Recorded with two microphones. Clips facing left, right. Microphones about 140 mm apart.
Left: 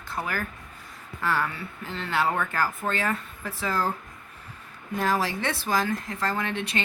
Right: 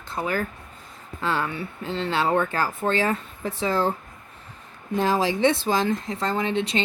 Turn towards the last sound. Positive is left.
turn(degrees=-20)  # may be behind; listen again after turning